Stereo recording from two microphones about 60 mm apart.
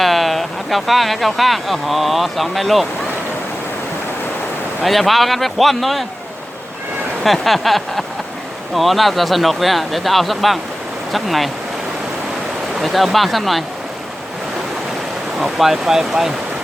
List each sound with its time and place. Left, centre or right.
0.0 s speech: centre
4.8 s speech: centre
7.3 s speech: centre
12.8 s speech: centre
15.4 s speech: centre